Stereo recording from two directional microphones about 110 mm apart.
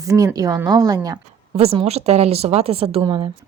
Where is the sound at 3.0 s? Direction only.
45° right (ahead or behind).